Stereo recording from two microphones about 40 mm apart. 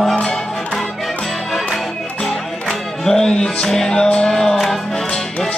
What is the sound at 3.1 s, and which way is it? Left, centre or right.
Music, centre.